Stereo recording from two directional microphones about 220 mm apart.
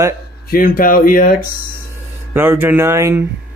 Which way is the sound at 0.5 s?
40° left (ahead or behind).